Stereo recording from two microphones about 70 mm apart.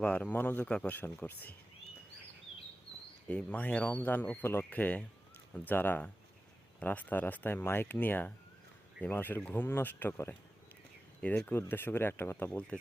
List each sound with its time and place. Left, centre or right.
0.0 s speech: centre
3.2 s speech: centre
11.4 s speech: left